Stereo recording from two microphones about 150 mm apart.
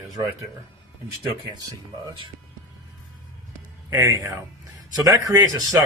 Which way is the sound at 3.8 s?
20° right (ahead or behind).